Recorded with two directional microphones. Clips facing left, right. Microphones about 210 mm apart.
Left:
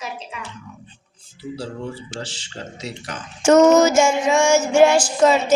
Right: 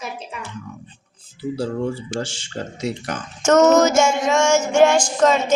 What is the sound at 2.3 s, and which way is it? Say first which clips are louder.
Speech: right 4 dB; 50° right (ahead or behind).